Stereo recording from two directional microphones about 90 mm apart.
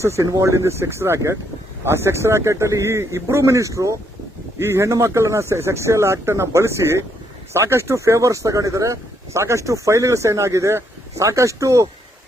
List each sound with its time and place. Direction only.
0.0 s speech: 30° right (ahead or behind)